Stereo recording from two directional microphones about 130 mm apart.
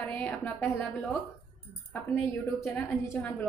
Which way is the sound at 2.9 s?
20° left (ahead or behind).